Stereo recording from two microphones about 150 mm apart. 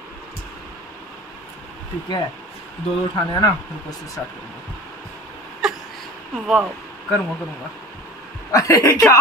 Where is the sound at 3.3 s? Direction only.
25° left (ahead or behind).